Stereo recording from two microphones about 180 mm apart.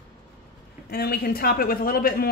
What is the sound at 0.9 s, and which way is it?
A man's voice, 60° left (ahead or behind).